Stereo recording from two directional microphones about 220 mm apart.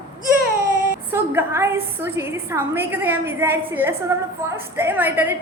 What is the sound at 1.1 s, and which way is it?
A woman's voice, 10° right (ahead or behind).